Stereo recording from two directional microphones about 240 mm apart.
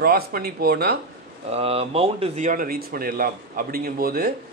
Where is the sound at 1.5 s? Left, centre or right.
Right.